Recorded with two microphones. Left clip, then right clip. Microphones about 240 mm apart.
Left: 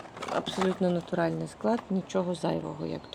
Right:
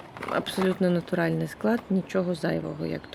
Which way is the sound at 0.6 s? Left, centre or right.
Centre.